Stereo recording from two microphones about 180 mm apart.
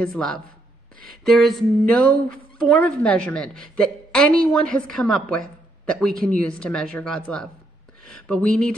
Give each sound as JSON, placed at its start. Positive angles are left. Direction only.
{"t": 0.0, "sound": "a woman's voice", "side_deg": 0}
{"t": 0.9, "sound": "speech", "side_deg": -55}
{"t": 1.2, "sound": "a woman's voice", "side_deg": 0}